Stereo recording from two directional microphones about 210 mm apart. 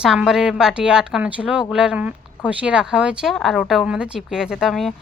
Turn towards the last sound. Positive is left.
turn(degrees=0)  # may be behind; listen again after turning